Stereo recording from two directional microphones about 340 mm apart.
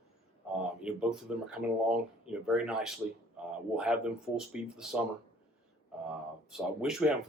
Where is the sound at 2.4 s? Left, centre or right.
Centre.